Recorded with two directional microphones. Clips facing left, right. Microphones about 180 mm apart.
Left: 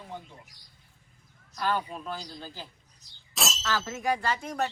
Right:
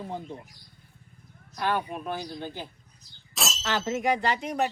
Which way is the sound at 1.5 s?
15° right (ahead or behind).